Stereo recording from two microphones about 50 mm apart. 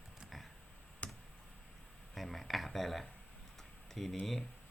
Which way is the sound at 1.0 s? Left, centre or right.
Left.